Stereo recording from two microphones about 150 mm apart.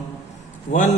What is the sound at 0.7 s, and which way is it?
Mantra, 55° left (ahead or behind).